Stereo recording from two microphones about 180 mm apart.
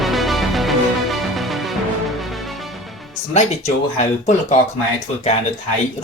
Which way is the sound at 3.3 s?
35° left (ahead or behind).